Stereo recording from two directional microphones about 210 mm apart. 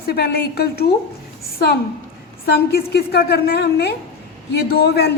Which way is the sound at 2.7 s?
50° left (ahead or behind).